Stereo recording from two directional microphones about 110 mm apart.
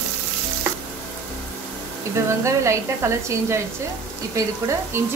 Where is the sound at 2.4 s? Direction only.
25° right (ahead or behind).